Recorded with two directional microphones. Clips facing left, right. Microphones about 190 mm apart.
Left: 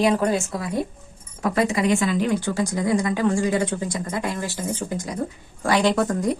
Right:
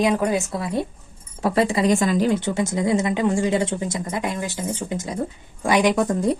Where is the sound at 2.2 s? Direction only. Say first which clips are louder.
Right 2 dB; 20° right (ahead or behind).